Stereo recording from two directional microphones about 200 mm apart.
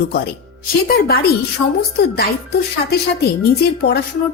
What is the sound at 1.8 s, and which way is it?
Speech, 50° left (ahead or behind).